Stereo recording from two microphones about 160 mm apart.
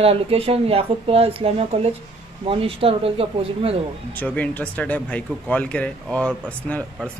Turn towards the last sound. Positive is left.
turn(degrees=10)  # may be behind; listen again after turning